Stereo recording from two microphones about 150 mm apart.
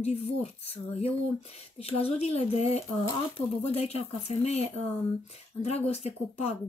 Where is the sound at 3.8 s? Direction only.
45° left (ahead or behind).